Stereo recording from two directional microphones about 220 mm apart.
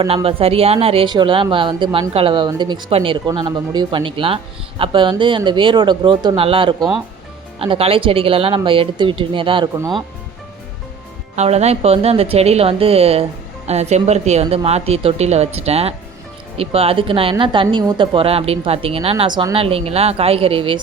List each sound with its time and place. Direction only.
0.0 s speech: 25° right (ahead or behind)
11.3 s speech: 30° right (ahead or behind)